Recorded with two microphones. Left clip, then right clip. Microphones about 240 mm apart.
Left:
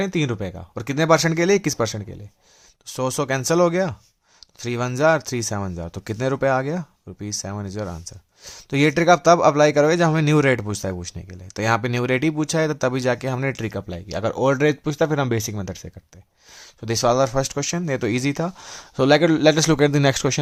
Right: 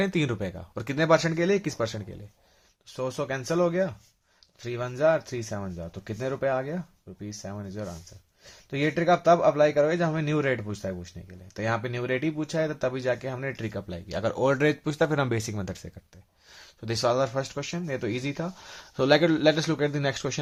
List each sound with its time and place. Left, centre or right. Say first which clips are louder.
0.0 s speech: left 3 dB; left
2.8 s speech: left 7 dB; left